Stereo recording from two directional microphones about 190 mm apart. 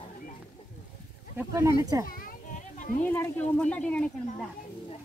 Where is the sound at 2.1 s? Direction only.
50° left (ahead or behind).